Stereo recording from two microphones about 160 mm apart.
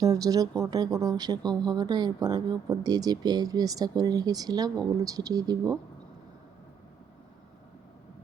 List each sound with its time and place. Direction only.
0.0 s speech: 20° right (ahead or behind)